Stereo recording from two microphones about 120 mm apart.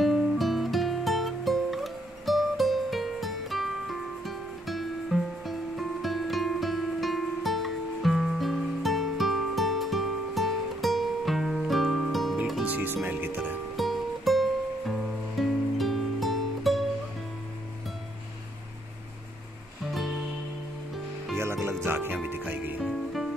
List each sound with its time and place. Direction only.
0.0 s music: centre (ahead or behind)
12.6 s music: 15° right (ahead or behind)
13.7 s music: centre (ahead or behind)
21.4 s music: 20° right (ahead or behind)
22.8 s music: centre (ahead or behind)